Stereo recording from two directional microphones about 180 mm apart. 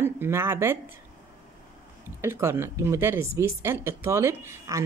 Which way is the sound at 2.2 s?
15° right (ahead or behind).